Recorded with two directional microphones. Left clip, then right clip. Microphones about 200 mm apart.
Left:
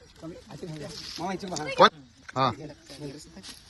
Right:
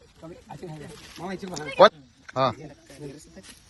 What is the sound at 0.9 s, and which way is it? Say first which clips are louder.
Speech: left 5 dB; 20° right (ahead or behind).